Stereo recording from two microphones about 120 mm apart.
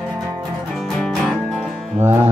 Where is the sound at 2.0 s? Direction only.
20° right (ahead or behind).